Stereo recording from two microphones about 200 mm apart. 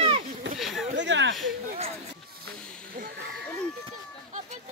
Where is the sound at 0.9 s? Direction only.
60° right (ahead or behind).